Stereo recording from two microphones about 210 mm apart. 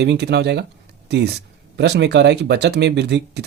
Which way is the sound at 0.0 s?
55° right (ahead or behind).